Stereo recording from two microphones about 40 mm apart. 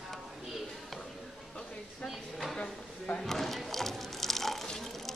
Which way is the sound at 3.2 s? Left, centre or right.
Centre.